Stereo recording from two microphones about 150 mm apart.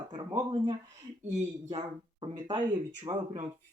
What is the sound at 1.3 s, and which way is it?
Speech, 50° right (ahead or behind).